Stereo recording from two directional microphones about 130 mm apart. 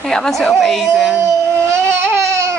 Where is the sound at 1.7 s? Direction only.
20° right (ahead or behind).